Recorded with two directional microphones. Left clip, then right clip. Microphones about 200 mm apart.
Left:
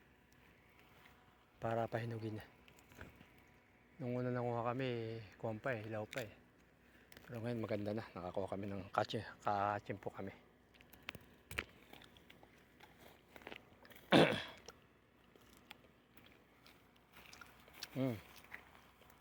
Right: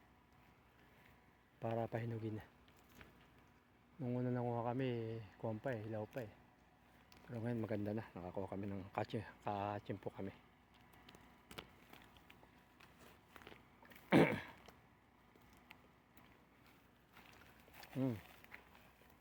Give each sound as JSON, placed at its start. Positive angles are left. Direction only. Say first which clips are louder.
{"t": 1.5, "sound": "speech", "louder": "left 3 dB", "side_deg": -15}
{"t": 4.0, "sound": "speech", "louder": "left 2 dB", "side_deg": -25}
{"t": 7.1, "sound": "speech", "louder": "left 1 dB", "side_deg": -25}
{"t": 13.8, "sound": "a sound", "louder": "left 3 dB", "side_deg": -25}
{"t": 17.7, "sound": "a sound", "louder": "left 2 dB", "side_deg": -10}
{"t": 18.5, "sound": "biting", "louder": "left 5 dB", "side_deg": 50}